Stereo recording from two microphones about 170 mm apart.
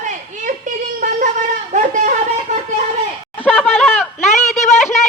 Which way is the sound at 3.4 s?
Centre (ahead or behind).